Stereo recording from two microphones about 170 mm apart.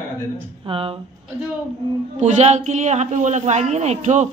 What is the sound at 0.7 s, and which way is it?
Child singing, 35° right (ahead or behind).